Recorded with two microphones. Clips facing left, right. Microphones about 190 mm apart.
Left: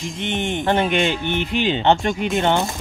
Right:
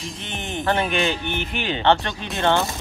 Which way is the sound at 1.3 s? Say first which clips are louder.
Left 5 dB; 75° left (ahead or behind).